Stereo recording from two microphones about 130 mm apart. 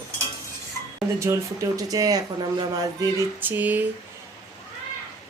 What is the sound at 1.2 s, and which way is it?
Speech, 25° right (ahead or behind).